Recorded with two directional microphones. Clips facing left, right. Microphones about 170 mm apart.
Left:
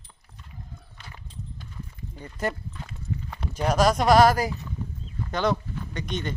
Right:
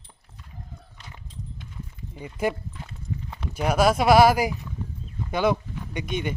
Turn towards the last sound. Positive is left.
turn(degrees=-10)  # may be behind; listen again after turning